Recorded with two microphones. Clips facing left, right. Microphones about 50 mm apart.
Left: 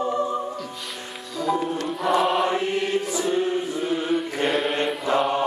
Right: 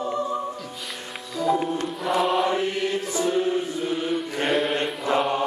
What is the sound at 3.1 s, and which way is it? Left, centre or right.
Choir, centre.